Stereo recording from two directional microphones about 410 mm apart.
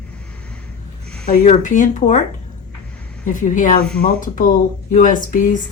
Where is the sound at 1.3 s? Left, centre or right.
Centre.